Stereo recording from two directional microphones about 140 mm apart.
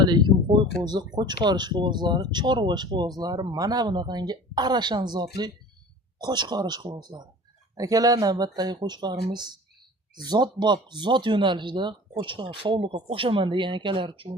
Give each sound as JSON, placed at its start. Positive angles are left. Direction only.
{"t": 0.0, "sound": "speech", "side_deg": -30}